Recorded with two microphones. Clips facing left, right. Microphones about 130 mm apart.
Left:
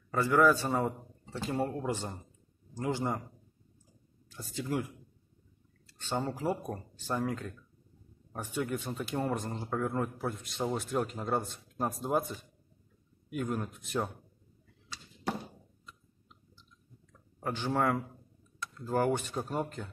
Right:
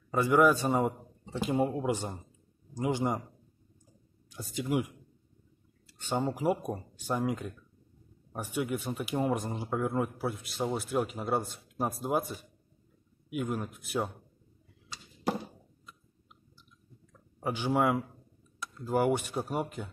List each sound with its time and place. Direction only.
0.1 s speech: 15° right (ahead or behind)
4.3 s speech: 15° right (ahead or behind)
17.4 s speech: 10° right (ahead or behind)